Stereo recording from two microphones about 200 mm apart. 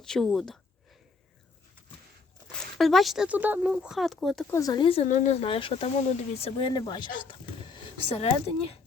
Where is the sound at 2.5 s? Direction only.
Centre (ahead or behind).